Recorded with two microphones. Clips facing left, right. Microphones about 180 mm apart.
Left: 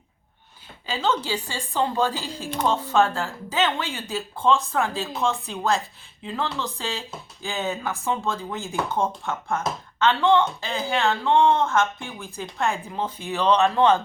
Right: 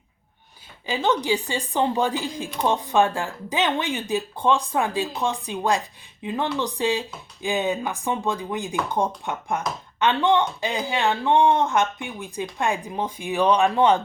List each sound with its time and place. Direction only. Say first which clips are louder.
0.9 s a woman's voice: right 3 dB; 15° right (ahead or behind)